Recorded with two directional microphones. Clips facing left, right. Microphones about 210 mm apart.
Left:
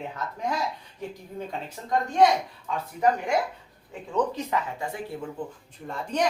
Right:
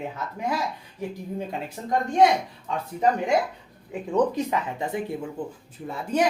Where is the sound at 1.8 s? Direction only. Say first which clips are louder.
Right 6 dB; 15° right (ahead or behind).